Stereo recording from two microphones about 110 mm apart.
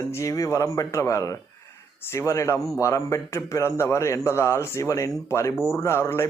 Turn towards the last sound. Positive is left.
turn(degrees=25)  # may be behind; listen again after turning